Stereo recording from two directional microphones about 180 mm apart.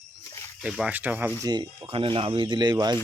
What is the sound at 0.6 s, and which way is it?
Speech, 5° right (ahead or behind).